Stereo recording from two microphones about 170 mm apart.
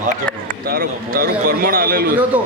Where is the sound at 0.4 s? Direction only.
60° right (ahead or behind).